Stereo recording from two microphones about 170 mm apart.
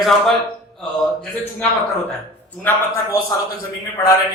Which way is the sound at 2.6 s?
15° left (ahead or behind).